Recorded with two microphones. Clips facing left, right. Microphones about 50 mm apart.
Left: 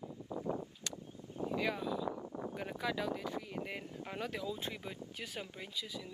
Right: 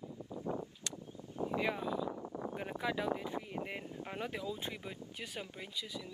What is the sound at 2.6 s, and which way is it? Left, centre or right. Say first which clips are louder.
Speech: right 1 dB; centre.